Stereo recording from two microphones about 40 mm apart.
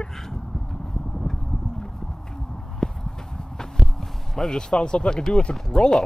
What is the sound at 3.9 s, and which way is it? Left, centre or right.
Speech, centre.